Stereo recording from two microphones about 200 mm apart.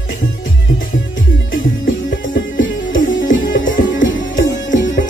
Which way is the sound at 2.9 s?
70° left (ahead or behind).